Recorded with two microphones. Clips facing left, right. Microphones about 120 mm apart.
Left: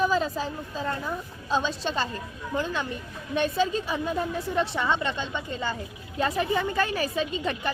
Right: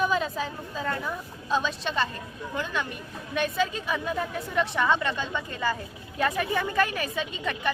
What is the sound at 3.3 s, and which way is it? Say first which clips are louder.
A woman's voice: left 2 dB; 30° left (ahead or behind).